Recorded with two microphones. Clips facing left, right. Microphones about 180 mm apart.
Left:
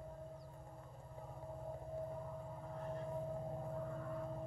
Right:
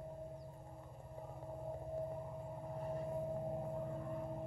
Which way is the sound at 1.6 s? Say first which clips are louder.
Right 3 dB; 20° right (ahead or behind).